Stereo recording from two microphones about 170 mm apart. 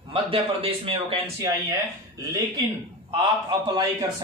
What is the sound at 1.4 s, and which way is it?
Speech, 20° right (ahead or behind).